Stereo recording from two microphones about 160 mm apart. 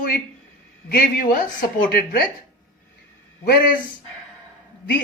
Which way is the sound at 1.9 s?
85° left.